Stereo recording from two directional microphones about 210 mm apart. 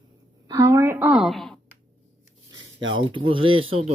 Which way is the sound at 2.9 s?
25° right (ahead or behind).